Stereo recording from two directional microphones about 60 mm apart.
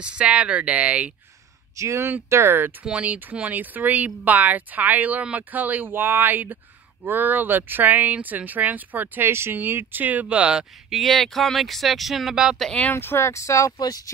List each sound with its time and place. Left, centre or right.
0.0 s speech: centre
1.8 s speech: right
2.8 s speech: right
10.9 s speech: centre
12.9 s speech: left
13.2 s speech: left